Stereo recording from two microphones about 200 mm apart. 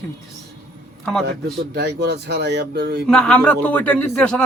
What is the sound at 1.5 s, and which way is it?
Speech, 55° right (ahead or behind).